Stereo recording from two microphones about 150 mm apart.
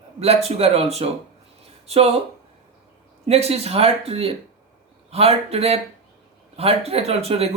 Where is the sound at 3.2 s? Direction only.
45° right (ahead or behind).